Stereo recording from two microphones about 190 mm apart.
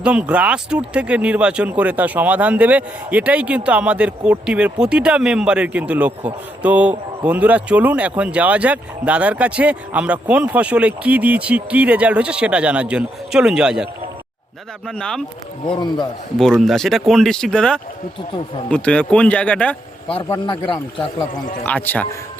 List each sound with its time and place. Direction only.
0.0 s speech: 5° right (ahead or behind)
14.8 s speech: 5° left (ahead or behind)
15.6 s a man's voice: 25° left (ahead or behind)
16.4 s speech: centre (ahead or behind)
20.2 s a man's voice: 20° left (ahead or behind)
21.6 s speech: 10° left (ahead or behind)